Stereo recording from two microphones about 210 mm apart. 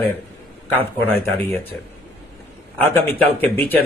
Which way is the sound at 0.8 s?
10° left (ahead or behind).